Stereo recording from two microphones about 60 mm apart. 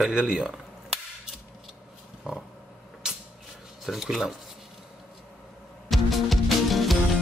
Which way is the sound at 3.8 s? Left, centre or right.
Centre.